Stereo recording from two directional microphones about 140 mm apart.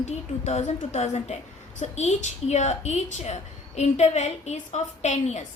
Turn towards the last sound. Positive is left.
turn(degrees=55)  # may be behind; listen again after turning